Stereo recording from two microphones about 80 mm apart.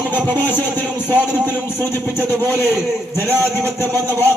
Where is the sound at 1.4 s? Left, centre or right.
Right.